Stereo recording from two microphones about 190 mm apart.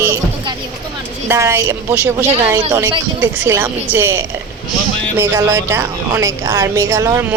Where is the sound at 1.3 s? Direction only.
15° right (ahead or behind).